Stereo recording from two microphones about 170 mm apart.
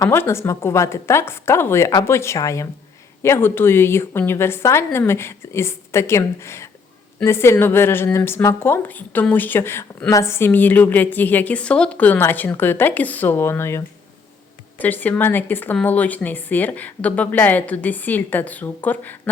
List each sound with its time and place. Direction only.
0.0 s a woman's voice: 15° left (ahead or behind)